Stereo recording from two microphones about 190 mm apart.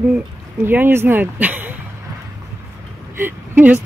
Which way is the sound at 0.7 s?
10° right (ahead or behind).